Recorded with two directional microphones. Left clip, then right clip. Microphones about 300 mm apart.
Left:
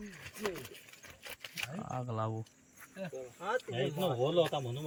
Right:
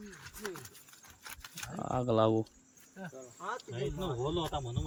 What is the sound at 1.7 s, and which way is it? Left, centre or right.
Speech, right.